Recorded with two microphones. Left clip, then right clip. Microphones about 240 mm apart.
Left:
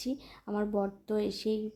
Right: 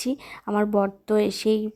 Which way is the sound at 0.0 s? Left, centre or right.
Right.